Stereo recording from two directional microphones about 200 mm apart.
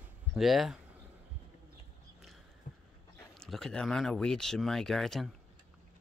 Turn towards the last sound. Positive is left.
turn(degrees=0)  # may be behind; listen again after turning